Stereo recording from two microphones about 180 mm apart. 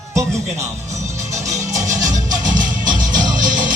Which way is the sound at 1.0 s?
40° right (ahead or behind).